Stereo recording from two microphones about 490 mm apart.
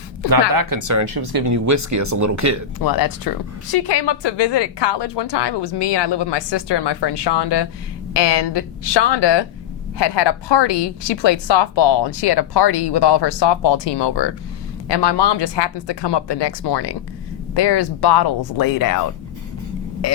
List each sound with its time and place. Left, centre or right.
0.3 s speech: right
2.7 s a woman's voice: left